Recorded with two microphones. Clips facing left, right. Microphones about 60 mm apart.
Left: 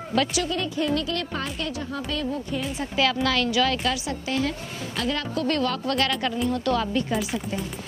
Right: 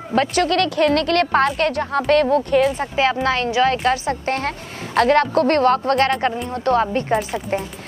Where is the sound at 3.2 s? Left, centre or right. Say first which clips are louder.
Right 5 dB; right.